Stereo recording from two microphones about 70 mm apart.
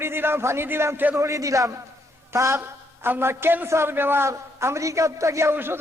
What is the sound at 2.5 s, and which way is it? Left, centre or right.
A man's voice, right.